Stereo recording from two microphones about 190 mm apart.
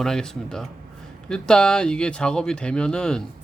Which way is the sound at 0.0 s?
5° left (ahead or behind).